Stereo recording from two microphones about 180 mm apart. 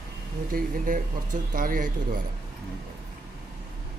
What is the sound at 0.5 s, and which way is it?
Speech, 50° right (ahead or behind).